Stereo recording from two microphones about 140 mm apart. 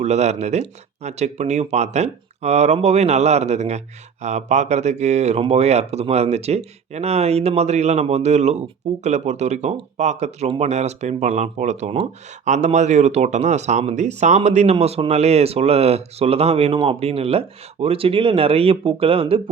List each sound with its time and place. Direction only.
0.0 s speech: 50° right (ahead or behind)